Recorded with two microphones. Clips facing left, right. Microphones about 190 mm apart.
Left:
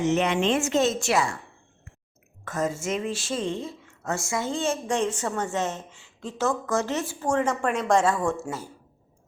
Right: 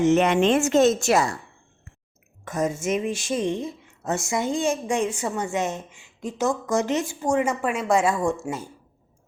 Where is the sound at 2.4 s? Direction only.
15° right (ahead or behind).